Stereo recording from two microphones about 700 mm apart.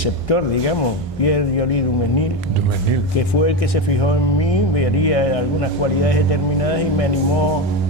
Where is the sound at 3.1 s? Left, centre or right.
Left.